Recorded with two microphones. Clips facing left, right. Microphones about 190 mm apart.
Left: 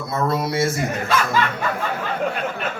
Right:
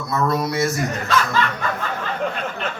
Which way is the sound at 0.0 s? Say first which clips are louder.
Right 1 dB; 25° left (ahead or behind).